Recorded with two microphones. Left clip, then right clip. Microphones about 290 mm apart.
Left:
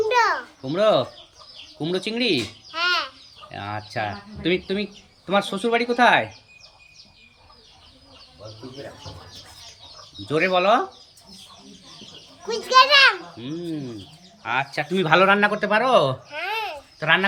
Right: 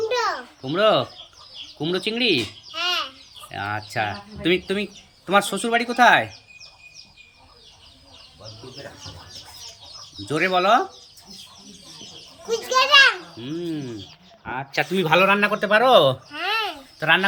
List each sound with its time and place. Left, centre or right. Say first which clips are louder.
0.1 s a sound: left 4 dB; centre
1.8 s a child's voice: right 2 dB; centre
10.2 s speech: even; centre
12.5 s children playing: left 2 dB; centre
14.4 s speech: left 1 dB; centre
16.3 s babbling: right 3 dB; left
17.0 s speech: right 1 dB; centre